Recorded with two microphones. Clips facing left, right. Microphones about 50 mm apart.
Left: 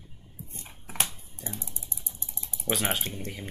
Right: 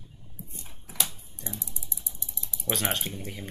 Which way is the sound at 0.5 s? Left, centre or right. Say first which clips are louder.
Left 3 dB; left.